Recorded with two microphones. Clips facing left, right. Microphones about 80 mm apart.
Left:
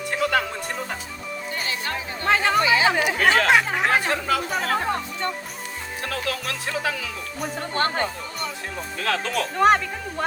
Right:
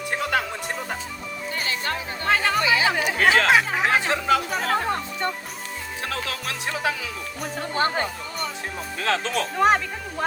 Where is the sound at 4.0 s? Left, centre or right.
Right.